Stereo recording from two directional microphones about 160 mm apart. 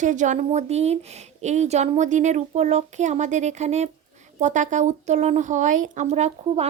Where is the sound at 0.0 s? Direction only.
50° right (ahead or behind).